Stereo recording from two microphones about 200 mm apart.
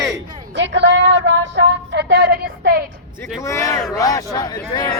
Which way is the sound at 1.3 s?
60° right (ahead or behind).